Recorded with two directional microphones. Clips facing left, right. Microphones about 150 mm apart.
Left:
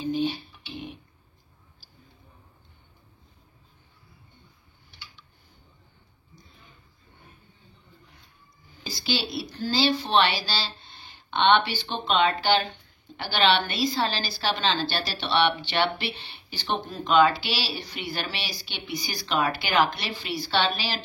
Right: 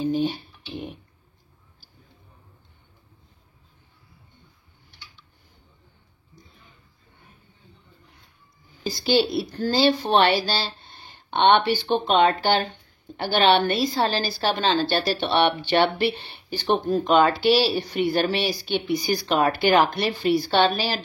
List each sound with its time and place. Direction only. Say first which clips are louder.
0.0 s a woman's voice: right 3 dB; 45° right (ahead or behind)
8.8 s a woman's voice: right 9 dB; 50° right (ahead or behind)